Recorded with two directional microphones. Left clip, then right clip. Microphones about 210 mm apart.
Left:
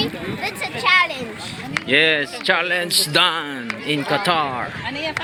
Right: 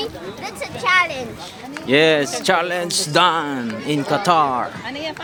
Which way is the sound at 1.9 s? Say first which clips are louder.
Right 2 dB; 10° right (ahead or behind).